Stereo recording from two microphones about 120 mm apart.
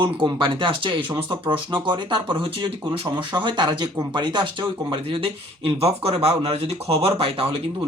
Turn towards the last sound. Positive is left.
turn(degrees=-50)  # may be behind; listen again after turning